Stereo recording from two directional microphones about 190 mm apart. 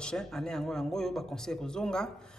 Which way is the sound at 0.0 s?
5° left (ahead or behind).